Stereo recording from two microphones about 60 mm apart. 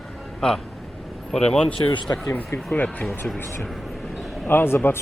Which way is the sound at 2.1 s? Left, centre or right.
Left.